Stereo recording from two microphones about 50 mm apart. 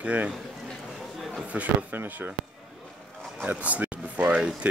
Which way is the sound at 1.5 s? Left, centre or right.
Right.